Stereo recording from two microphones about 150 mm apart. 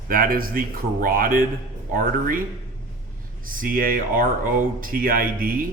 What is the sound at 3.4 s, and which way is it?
Speech, 65° right (ahead or behind).